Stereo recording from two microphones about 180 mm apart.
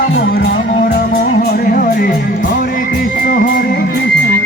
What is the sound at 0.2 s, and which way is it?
Music, 60° left (ahead or behind).